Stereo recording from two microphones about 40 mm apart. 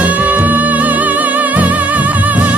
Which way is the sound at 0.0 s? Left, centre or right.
Right.